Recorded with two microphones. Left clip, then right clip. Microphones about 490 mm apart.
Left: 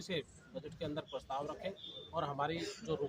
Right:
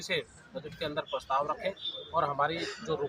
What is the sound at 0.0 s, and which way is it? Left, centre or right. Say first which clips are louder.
Speech: right 8 dB; left.